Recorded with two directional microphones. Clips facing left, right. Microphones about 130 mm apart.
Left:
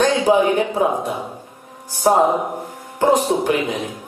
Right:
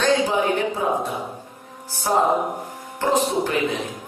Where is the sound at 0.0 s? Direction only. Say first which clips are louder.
Left 5 dB; 15° left (ahead or behind).